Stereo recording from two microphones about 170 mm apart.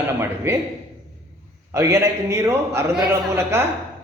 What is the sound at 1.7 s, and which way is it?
A man's voice, 15° right (ahead or behind).